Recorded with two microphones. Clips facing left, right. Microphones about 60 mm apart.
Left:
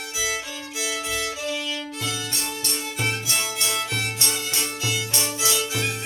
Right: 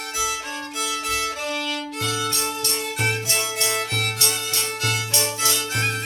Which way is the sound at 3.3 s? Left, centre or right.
Right.